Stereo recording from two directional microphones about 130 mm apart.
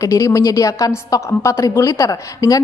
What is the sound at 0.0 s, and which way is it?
A woman's voice, 25° left (ahead or behind).